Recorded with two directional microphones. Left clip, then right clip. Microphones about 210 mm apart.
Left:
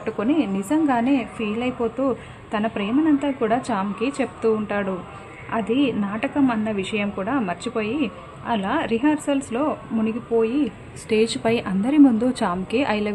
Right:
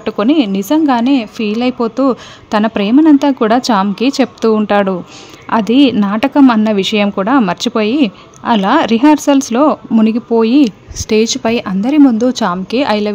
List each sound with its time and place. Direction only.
0.0 s a woman's voice: 45° right (ahead or behind)
11.1 s speech: 35° right (ahead or behind)